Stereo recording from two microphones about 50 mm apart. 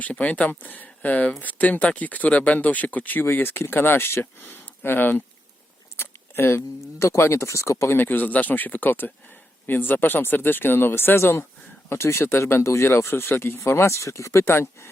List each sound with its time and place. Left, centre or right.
0.0 s speech: left
3.2 s speech: left
6.0 s keys jangling: left
6.8 s speech: left
7.2 s speech: left
7.9 s speech: left
12.9 s speech: left
13.7 s speech: left